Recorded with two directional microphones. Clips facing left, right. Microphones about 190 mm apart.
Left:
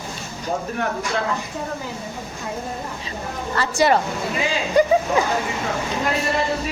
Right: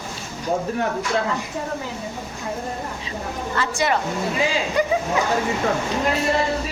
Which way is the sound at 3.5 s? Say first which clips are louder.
Left 4 dB; 35° left (ahead or behind).